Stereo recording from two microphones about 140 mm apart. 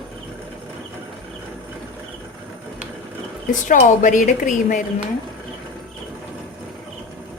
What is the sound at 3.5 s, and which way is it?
A woman's voice, 65° left (ahead or behind).